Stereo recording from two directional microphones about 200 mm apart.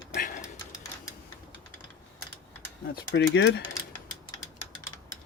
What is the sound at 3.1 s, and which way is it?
Speech, 60° left (ahead or behind).